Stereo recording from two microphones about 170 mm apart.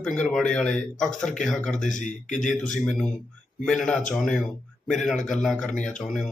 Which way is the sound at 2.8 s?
5° left (ahead or behind).